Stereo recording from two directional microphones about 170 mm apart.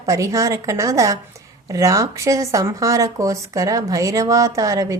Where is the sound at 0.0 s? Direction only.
20° right (ahead or behind).